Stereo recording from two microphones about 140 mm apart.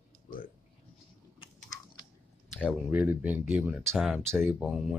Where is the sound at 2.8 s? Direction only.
15° right (ahead or behind).